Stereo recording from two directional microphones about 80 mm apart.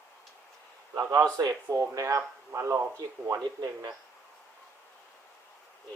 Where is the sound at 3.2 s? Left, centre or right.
Right.